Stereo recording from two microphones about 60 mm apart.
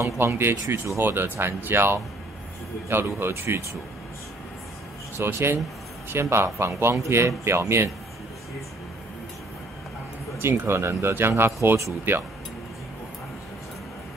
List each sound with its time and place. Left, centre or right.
0.0 s speech: right
5.1 s speech: right
10.4 s speech: right